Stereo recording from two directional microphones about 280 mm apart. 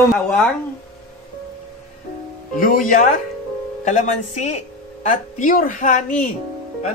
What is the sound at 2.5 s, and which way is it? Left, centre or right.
A woman's voice, left.